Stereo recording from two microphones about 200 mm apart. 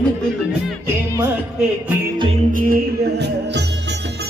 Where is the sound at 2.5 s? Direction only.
45° right (ahead or behind).